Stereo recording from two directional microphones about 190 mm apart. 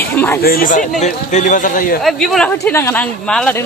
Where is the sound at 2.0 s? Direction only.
Centre (ahead or behind).